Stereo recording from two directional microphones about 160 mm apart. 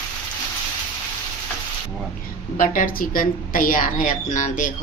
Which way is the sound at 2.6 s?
60° left (ahead or behind).